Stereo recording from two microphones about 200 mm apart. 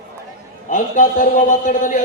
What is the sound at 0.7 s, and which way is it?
A man's voice, 40° left (ahead or behind).